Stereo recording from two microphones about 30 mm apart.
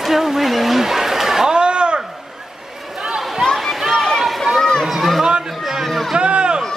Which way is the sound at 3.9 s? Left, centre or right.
Centre.